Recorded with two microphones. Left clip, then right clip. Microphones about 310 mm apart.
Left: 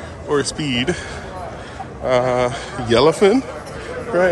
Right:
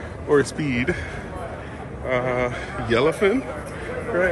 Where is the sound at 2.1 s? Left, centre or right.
Centre.